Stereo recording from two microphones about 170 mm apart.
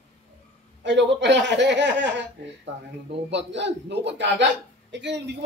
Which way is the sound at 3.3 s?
90° right.